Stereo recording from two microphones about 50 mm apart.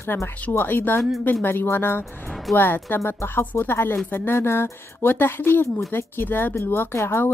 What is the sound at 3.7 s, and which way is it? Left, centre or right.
Speech, left.